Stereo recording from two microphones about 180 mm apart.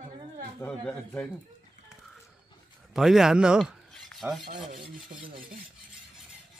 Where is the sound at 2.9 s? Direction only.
Centre (ahead or behind).